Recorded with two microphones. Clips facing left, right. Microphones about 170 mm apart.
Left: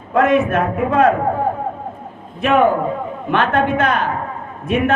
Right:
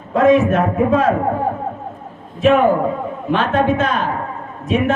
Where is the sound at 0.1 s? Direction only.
55° left (ahead or behind).